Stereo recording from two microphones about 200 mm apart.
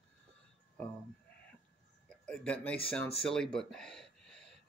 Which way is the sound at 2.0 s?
5° left (ahead or behind).